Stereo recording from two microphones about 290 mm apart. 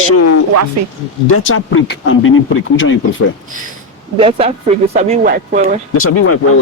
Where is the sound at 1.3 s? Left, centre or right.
Left.